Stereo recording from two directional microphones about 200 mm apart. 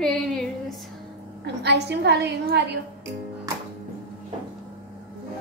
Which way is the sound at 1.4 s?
60° right (ahead or behind).